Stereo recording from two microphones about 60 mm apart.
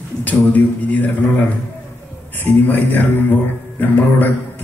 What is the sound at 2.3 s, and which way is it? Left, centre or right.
A man's voice, left.